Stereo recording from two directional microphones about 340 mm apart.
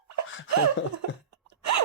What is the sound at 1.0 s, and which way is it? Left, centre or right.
Cough, right.